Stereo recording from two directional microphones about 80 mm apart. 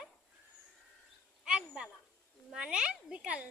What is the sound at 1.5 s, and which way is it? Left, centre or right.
A child's voice, centre.